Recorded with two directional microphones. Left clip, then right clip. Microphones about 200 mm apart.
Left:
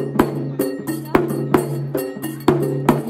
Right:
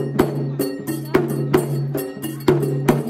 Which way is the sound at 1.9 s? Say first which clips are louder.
Left 2 dB; 25° left (ahead or behind).